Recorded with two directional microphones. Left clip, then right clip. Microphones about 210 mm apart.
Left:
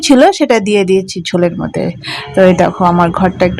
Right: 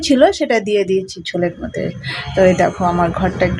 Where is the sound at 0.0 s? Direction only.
25° left (ahead or behind).